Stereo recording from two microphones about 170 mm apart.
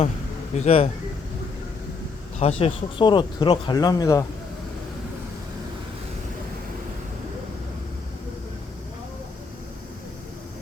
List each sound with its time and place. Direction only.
0.5 s speech: 40° left (ahead or behind)
2.4 s speech: 35° left (ahead or behind)